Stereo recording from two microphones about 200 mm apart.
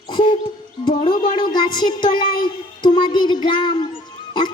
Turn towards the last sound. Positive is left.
turn(degrees=20)  # may be behind; listen again after turning